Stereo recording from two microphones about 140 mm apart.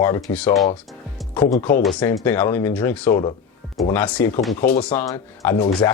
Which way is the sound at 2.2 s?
15° left (ahead or behind).